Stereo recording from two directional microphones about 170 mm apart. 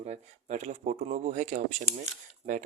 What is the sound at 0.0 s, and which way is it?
Speech, 40° right (ahead or behind).